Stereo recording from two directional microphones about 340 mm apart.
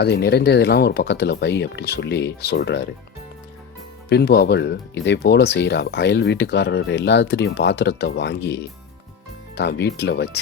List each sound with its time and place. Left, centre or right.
0.0 s speech: left
4.1 s speech: left